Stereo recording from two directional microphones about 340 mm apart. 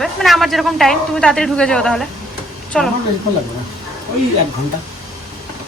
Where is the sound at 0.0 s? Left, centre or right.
Centre.